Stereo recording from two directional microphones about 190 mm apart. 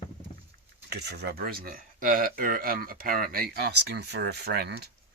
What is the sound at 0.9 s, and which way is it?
Speech, 60° right (ahead or behind).